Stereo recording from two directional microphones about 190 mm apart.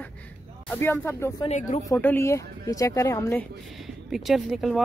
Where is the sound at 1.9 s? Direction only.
10° left (ahead or behind).